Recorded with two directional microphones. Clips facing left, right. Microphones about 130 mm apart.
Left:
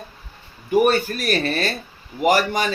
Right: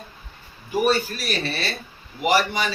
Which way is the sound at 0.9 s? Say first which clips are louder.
Left 3 dB; 50° left (ahead or behind).